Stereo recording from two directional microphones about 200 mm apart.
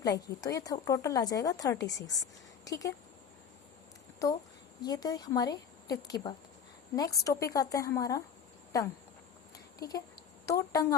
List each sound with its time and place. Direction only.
0.0 s speech: 20° left (ahead or behind)
4.8 s a woman's voice: 20° left (ahead or behind)
9.7 s speech: 20° left (ahead or behind)